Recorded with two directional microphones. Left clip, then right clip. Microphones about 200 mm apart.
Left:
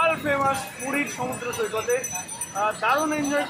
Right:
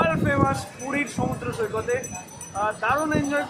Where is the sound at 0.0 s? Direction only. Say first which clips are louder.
Left 1 dB; 5° right (ahead or behind).